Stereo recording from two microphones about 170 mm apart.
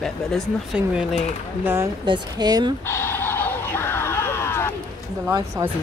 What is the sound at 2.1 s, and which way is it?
Speech, 25° right (ahead or behind).